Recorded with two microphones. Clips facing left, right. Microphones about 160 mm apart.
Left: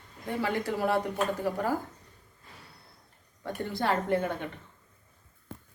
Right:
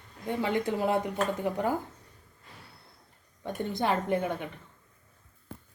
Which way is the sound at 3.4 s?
20° right (ahead or behind).